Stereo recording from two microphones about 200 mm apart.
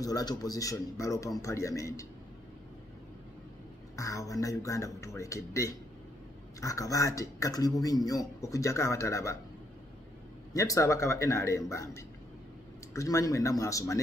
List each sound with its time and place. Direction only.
0.0 s speech: 20° left (ahead or behind)
3.9 s speech: 15° left (ahead or behind)
10.5 s speech: 15° left (ahead or behind)